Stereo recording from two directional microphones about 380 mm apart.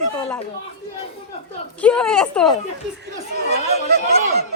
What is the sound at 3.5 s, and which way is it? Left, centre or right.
Speech, right.